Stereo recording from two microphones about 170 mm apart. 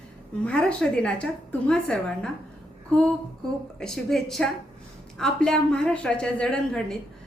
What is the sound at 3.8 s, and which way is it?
A woman's voice, 5° left (ahead or behind).